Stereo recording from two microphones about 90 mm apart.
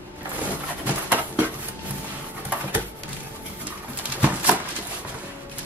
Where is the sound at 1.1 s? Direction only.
20° right (ahead or behind).